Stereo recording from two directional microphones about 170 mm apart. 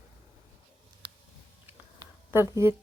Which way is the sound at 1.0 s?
25° right (ahead or behind).